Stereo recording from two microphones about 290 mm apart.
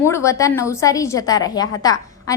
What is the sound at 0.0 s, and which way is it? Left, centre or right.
A woman's voice, centre.